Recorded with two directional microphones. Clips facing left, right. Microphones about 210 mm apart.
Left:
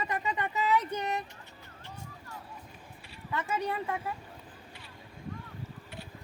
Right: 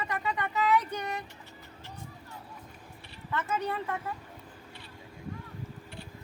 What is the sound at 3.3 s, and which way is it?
Speech, 15° left (ahead or behind).